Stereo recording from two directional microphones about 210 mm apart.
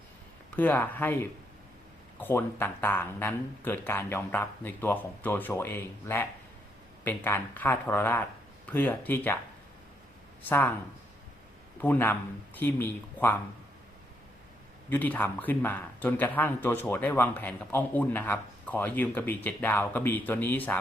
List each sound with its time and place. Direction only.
0.5 s speech: 10° left (ahead or behind)
11.8 s speech: 10° left (ahead or behind)
14.8 s speech: 10° left (ahead or behind)